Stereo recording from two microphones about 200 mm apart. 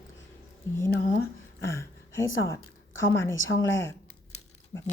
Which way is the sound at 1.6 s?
15° left (ahead or behind).